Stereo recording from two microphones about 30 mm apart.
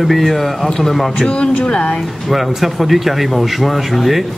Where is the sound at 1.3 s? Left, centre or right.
Left.